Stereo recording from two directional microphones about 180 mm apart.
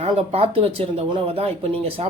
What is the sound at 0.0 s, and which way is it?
Speech, 30° right (ahead or behind).